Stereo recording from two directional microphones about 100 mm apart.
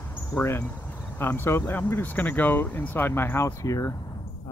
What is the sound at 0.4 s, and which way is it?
Speech, 25° left (ahead or behind).